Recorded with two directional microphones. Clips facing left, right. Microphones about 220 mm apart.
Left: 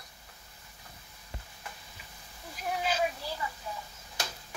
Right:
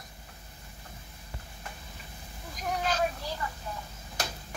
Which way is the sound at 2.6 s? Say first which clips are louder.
Right 1 dB; 5° left (ahead or behind).